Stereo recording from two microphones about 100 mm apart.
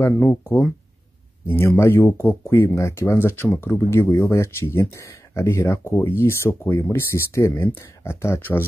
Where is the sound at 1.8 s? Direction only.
25° left (ahead or behind).